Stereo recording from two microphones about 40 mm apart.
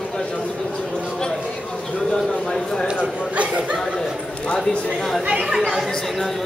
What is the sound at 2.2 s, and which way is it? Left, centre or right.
Speech, centre.